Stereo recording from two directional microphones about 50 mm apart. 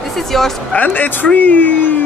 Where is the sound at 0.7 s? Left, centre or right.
Left.